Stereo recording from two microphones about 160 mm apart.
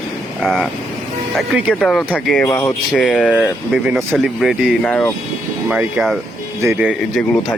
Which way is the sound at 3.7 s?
5° right (ahead or behind).